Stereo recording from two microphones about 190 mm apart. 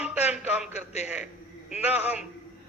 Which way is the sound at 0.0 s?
5° right (ahead or behind).